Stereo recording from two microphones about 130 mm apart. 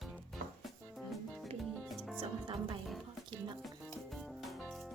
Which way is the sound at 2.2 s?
40° right (ahead or behind).